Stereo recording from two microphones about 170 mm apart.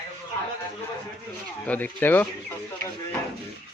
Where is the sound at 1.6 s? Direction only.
10° left (ahead or behind).